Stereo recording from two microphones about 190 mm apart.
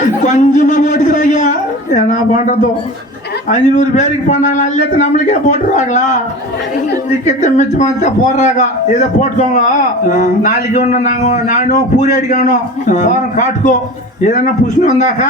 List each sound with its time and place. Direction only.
0.2 s a sound: 40° left (ahead or behind)
3.5 s a man's voice: 40° left (ahead or behind)
7.3 s a man's voice: 40° left (ahead or behind)